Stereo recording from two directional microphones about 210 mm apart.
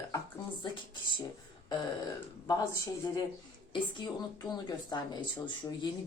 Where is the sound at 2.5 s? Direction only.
15° left (ahead or behind).